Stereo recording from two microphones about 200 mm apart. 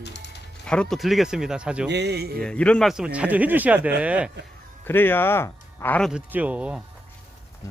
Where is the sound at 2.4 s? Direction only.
5° left (ahead or behind).